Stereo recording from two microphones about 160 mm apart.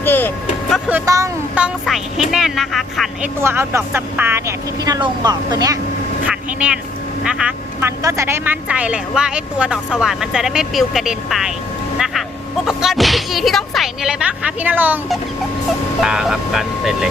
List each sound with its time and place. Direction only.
0.0 s speech: 10° left (ahead or behind)
1.0 s speech: 20° right (ahead or behind)
1.5 s speech: 5° right (ahead or behind)
3.4 s speech: 15° right (ahead or behind)
4.9 s speech: 25° right (ahead or behind)
6.2 s speech: 10° right (ahead or behind)
16.0 s speech: 5° right (ahead or behind)